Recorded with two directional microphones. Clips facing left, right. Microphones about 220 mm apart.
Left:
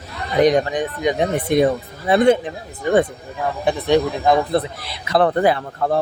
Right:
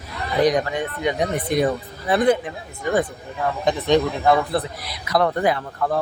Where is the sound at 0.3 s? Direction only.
25° left (ahead or behind).